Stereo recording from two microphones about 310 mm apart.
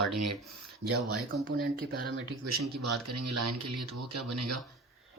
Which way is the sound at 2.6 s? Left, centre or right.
Right.